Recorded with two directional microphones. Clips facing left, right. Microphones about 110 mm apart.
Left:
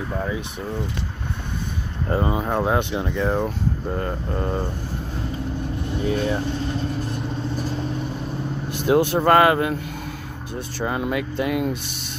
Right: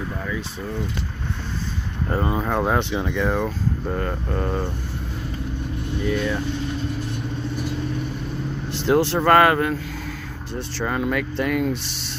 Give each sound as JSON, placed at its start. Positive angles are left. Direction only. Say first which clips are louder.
{"t": 2.0, "sound": "speech", "louder": "left 1 dB", "side_deg": 5}
{"t": 3.1, "sound": "speech", "louder": "left 1 dB", "side_deg": 35}
{"t": 3.3, "sound": "speech", "louder": "even", "side_deg": 15}
{"t": 6.0, "sound": "speech", "louder": "left 1 dB", "side_deg": 35}
{"t": 8.8, "sound": "speech", "louder": "left 1 dB", "side_deg": 15}
{"t": 9.3, "sound": "speech", "louder": "even", "side_deg": -45}
{"t": 10.5, "sound": "speech", "louder": "even", "side_deg": 15}